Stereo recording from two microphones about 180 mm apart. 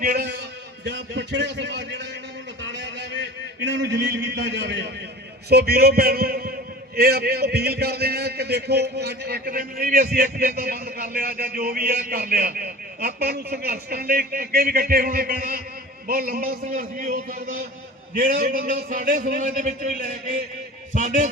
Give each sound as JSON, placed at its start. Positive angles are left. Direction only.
{"t": 0.0, "sound": "a man's voice", "side_deg": -55}
{"t": 0.9, "sound": "a man's voice", "side_deg": -80}
{"t": 2.6, "sound": "a sound", "side_deg": -80}
{"t": 5.5, "sound": "a man's voice", "side_deg": -60}